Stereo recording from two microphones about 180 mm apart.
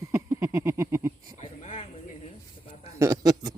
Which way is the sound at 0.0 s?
15° right (ahead or behind).